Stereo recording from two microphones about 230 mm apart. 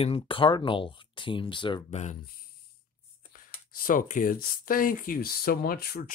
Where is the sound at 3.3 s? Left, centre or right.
Left.